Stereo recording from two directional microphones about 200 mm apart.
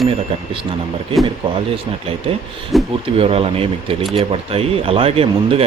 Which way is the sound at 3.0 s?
30° right (ahead or behind).